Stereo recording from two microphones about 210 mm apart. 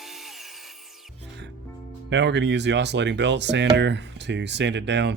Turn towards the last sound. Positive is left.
turn(degrees=-55)  # may be behind; listen again after turning